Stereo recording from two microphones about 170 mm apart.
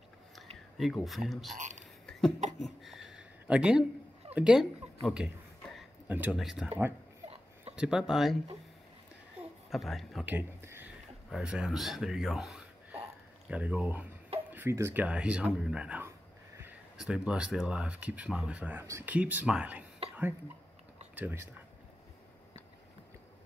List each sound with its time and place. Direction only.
0.7 s speech: centre (ahead or behind)
1.6 s a sound: 45° right (ahead or behind)
2.0 s a sound: 5° left (ahead or behind)
2.6 s speech: centre (ahead or behind)
7.7 s speech: 5° right (ahead or behind)
9.7 s speech: centre (ahead or behind)
10.3 s speech: 15° right (ahead or behind)
11.2 s speech: centre (ahead or behind)
20.0 s a sound: 35° right (ahead or behind)
21.1 s speech: 10° right (ahead or behind)